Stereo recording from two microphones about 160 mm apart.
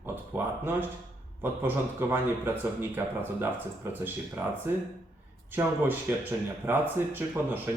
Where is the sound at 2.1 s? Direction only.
15° right (ahead or behind).